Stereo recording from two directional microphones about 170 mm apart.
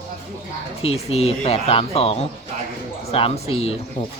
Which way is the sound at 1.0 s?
35° left (ahead or behind).